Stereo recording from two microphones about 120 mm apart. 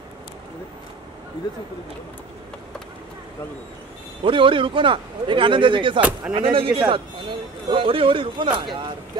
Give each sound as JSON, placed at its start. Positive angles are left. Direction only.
{"t": 4.2, "sound": "a man's voice", "side_deg": -45}
{"t": 5.9, "sound": "speech", "side_deg": -10}
{"t": 6.3, "sound": "a man's voice", "side_deg": -45}